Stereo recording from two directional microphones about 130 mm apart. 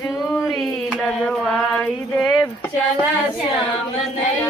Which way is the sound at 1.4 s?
5° left (ahead or behind).